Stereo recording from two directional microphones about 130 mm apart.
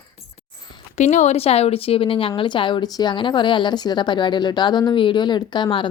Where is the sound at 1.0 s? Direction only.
65° left (ahead or behind); by 5.8 s 40° left (ahead or behind).